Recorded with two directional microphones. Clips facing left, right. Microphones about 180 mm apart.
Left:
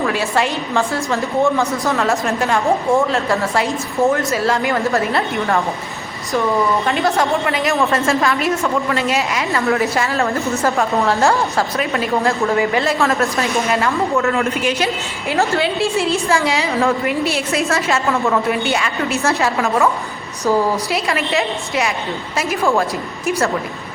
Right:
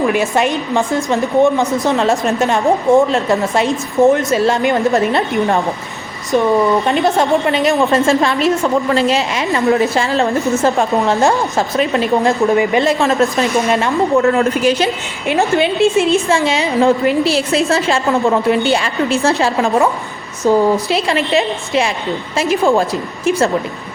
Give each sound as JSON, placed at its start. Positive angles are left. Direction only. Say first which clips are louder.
{"t": 0.0, "sound": "a woman's voice", "louder": "right 4 dB", "side_deg": -20}
{"t": 6.8, "sound": "a woman's voice", "louder": "right 3 dB", "side_deg": -20}
{"t": 15.3, "sound": "a woman's voice", "louder": "right 4 dB", "side_deg": -20}